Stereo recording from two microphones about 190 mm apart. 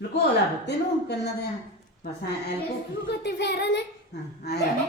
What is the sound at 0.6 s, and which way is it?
Speech, 60° left (ahead or behind).